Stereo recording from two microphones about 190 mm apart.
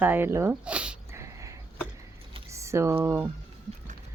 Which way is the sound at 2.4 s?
15° right (ahead or behind).